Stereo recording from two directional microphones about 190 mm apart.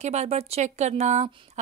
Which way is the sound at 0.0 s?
35° right (ahead or behind).